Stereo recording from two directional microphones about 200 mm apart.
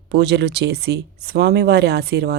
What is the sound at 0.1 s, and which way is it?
Speech, 60° right (ahead or behind).